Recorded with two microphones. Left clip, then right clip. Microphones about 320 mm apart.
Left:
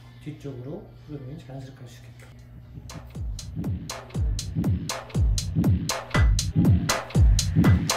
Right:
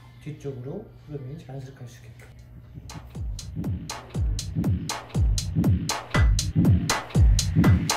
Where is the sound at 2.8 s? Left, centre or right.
Centre.